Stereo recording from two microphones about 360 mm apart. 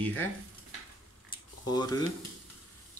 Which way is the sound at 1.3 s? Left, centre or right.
Centre.